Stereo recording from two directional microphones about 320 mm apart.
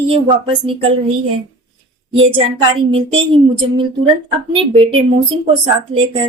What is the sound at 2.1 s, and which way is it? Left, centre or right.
Speech, centre.